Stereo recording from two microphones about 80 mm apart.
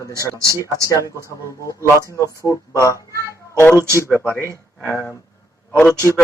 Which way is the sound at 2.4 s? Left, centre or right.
Left.